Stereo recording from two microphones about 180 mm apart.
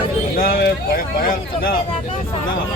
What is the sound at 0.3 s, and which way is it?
Speech, 55° left (ahead or behind).